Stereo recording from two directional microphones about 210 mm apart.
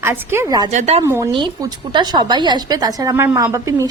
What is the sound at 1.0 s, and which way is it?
A woman's voice, 15° right (ahead or behind).